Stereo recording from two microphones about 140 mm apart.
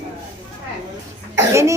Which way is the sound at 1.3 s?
20° right (ahead or behind).